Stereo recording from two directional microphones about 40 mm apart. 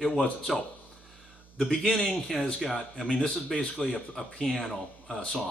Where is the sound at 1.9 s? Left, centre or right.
Centre.